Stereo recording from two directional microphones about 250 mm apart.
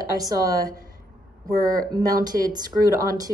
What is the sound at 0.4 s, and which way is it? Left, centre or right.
Speech, centre.